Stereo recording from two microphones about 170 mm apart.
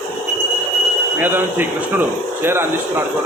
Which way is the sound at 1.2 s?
10° right (ahead or behind).